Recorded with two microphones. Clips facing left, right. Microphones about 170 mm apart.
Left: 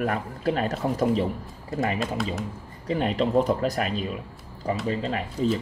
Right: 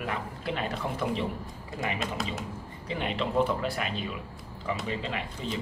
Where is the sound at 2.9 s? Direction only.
40° left (ahead or behind).